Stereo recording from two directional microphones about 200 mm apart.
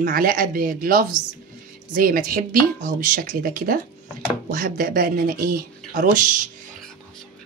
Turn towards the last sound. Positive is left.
turn(degrees=-40)  # may be behind; listen again after turning